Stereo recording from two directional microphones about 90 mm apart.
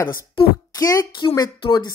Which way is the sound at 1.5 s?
65° left (ahead or behind).